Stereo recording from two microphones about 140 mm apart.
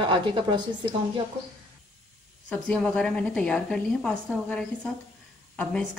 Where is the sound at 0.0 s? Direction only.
35° right (ahead or behind).